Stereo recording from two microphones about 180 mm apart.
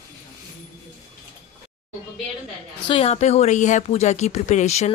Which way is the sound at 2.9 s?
35° left (ahead or behind).